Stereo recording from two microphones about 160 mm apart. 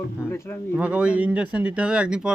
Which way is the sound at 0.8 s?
5° right (ahead or behind).